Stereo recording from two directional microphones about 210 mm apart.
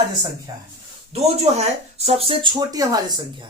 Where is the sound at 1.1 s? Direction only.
30° right (ahead or behind).